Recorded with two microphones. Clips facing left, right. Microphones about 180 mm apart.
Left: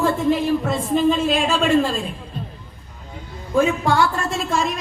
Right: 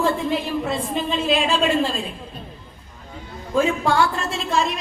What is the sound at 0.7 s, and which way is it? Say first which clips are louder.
Speech: left 6 dB; 45° left (ahead or behind).